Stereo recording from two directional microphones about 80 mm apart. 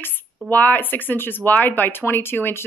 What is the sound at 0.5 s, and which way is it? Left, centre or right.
Speech, left.